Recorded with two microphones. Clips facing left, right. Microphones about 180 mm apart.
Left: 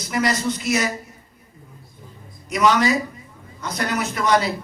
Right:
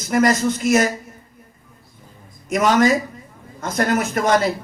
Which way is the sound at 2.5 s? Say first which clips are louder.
Right 3 dB; 50° right (ahead or behind).